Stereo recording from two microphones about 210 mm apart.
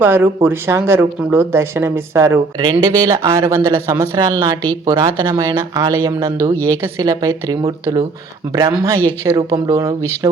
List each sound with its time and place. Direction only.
0.0 s speech: 10° right (ahead or behind)
9.2 s speech: 15° right (ahead or behind)